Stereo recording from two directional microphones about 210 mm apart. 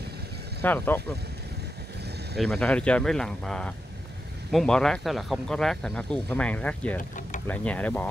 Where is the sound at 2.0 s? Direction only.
50° right (ahead or behind).